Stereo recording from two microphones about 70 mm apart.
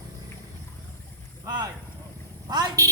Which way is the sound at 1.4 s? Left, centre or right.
Right.